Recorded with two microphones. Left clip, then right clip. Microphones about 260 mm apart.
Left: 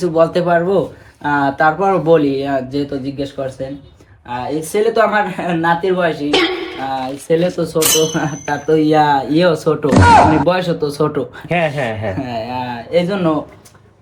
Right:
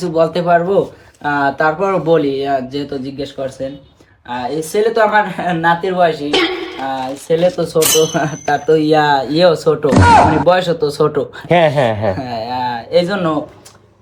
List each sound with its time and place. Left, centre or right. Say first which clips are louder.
0.0 s speech: left 1 dB; centre
4.3 s speech: right 1 dB; centre
11.4 s speech: right 7 dB; right
12.1 s speech: right 1 dB; centre